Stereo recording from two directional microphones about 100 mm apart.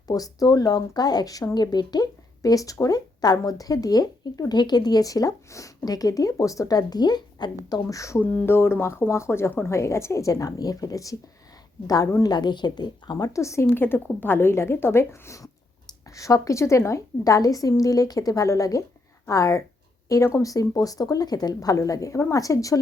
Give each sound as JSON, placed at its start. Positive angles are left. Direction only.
{"t": 0.1, "sound": "speech", "side_deg": 35}
{"t": 8.2, "sound": "speech", "side_deg": 15}
{"t": 12.2, "sound": "speech", "side_deg": 45}